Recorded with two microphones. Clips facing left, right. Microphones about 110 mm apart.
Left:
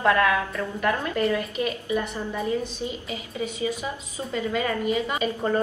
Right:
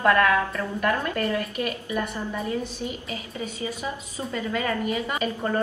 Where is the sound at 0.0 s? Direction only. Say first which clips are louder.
Right 1 dB; 20° left (ahead or behind).